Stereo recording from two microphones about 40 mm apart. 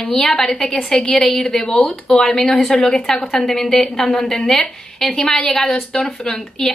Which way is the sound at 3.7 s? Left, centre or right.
Left.